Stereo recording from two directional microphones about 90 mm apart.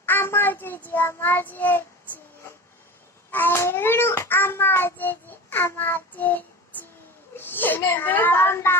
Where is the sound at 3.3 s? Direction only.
25° left (ahead or behind).